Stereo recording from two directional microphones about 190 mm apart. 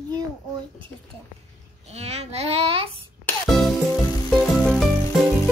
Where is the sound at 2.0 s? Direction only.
35° right (ahead or behind).